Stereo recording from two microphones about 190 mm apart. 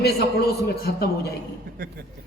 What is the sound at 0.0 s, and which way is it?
Speech, 55° left (ahead or behind).